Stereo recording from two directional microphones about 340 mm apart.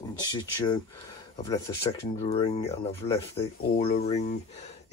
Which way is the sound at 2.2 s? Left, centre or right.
Centre.